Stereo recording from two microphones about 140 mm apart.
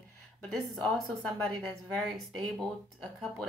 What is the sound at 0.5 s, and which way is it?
A woman's voice, centre (ahead or behind).